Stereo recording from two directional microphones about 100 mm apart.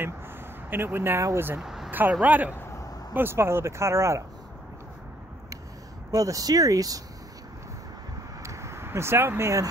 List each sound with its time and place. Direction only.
0.7 s speech: 20° right (ahead or behind)
1.6 s vehicle: 5° right (ahead or behind)
1.9 s speech: 20° right (ahead or behind)
6.1 s speech: 35° right (ahead or behind)
8.4 s vehicle: 30° right (ahead or behind)